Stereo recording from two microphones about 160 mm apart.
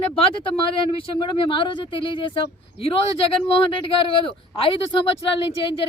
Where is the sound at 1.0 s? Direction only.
30° left (ahead or behind).